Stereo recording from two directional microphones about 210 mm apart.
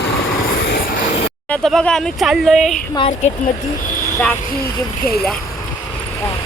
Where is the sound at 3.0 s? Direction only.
30° left (ahead or behind).